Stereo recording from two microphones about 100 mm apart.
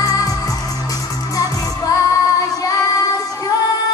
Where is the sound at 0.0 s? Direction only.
40° left (ahead or behind).